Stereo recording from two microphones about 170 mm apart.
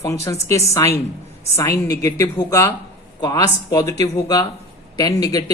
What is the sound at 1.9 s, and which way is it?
Speech, 20° left (ahead or behind).